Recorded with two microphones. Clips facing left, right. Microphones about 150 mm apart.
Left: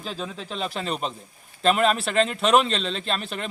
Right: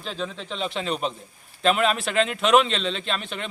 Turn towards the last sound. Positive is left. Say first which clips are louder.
# left 1 dB
turn(degrees=0)  # may be behind; listen again after turning